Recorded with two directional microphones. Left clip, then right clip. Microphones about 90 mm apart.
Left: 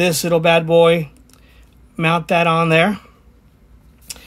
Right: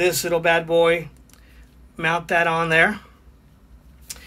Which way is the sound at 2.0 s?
60° left (ahead or behind).